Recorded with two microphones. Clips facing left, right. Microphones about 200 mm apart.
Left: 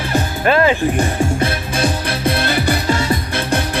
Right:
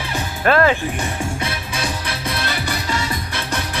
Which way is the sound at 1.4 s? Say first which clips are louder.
Left 7 dB; 50° left (ahead or behind).